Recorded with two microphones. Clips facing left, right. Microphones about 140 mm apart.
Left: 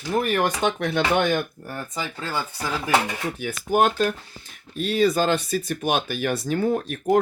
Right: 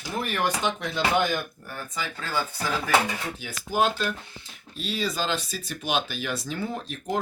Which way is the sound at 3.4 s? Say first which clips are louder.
Left 5 dB; 55° left (ahead or behind).